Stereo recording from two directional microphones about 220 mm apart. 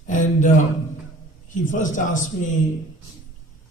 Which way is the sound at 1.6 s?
35° left (ahead or behind).